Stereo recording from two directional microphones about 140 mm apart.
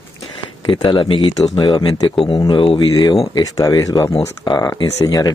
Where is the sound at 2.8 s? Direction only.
30° left (ahead or behind).